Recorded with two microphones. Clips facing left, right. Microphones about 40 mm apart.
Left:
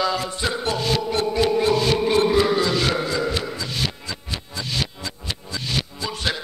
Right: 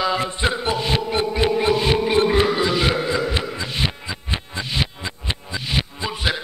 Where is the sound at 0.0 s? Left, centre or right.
Right.